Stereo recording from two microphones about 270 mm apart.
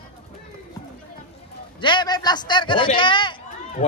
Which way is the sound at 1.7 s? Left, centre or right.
Centre.